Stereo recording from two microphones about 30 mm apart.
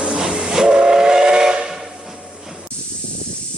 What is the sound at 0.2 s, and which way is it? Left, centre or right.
Train, centre.